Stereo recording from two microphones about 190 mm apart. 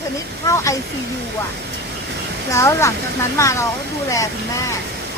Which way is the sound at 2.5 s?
15° left (ahead or behind).